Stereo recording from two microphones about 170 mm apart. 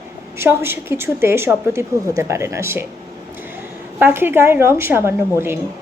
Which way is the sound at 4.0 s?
10° right (ahead or behind).